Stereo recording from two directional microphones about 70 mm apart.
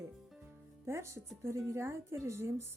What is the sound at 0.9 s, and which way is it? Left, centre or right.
Speech, right.